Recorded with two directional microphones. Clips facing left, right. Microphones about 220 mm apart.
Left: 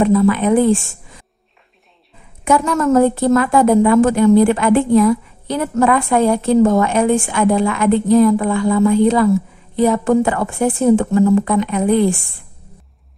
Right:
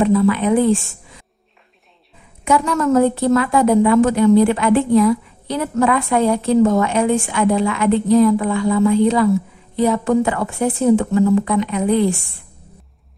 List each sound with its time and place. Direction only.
0.0 s a woman's voice: 45° left (ahead or behind)
2.4 s a woman's voice: 45° left (ahead or behind)